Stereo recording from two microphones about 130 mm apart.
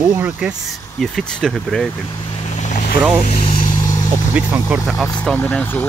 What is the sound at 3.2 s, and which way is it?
Speech, 75° left (ahead or behind).